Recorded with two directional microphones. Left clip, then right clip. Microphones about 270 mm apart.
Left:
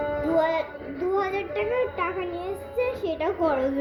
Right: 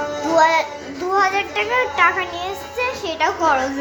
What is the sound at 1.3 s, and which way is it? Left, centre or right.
A child's voice, centre.